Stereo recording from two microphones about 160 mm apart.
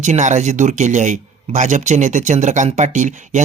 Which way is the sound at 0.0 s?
50° right (ahead or behind).